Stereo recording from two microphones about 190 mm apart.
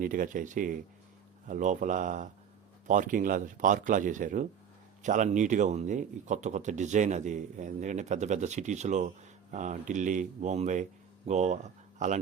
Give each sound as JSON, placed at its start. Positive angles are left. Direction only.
{"t": 0.0, "sound": "speech", "side_deg": -45}